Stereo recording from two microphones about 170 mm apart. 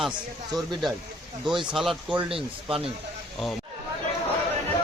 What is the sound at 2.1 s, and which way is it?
Speech, 35° right (ahead or behind).